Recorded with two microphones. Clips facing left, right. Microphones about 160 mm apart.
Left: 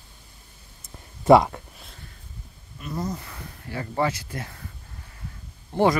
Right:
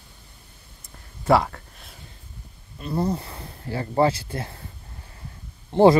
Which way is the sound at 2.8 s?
30° right (ahead or behind).